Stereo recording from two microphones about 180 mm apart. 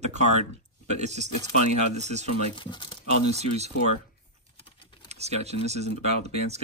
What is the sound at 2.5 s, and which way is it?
Speech, 25° left (ahead or behind).